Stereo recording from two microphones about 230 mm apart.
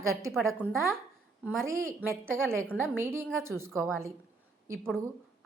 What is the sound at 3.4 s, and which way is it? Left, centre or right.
Speech, right.